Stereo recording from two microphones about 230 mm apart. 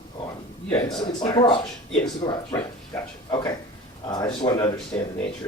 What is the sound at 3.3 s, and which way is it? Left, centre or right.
Speech, centre.